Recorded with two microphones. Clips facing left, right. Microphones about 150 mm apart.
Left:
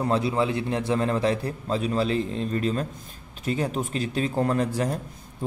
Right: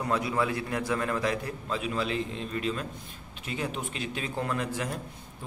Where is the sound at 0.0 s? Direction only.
30° left (ahead or behind).